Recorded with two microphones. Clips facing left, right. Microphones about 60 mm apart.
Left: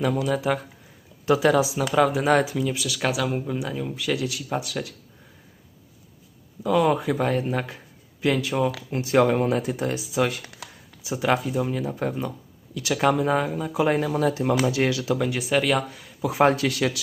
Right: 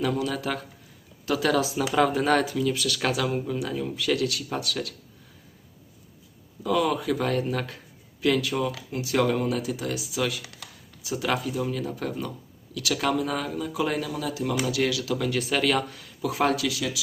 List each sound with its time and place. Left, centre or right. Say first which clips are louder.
0.0 s speech: left 3 dB; centre
3.3 s speech: even; centre
6.6 s speech: left 3 dB; centre
6.8 s speech: left 3 dB; left
11.0 s speech: left 4 dB; left
16.3 s speech: left 5 dB; left
16.6 s speech: left 5 dB; left